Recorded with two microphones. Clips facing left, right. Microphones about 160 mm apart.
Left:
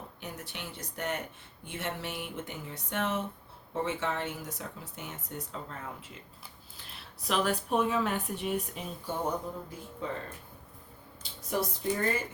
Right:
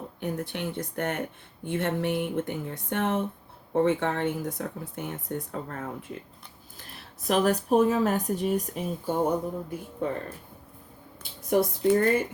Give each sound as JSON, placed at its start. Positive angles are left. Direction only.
{"t": 0.2, "sound": "speech", "side_deg": -55}
{"t": 6.7, "sound": "speech", "side_deg": -45}
{"t": 10.0, "sound": "speech", "side_deg": -55}
{"t": 11.2, "sound": "speech", "side_deg": -55}